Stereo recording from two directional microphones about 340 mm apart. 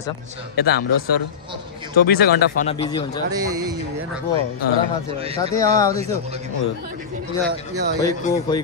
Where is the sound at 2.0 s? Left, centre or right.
Left.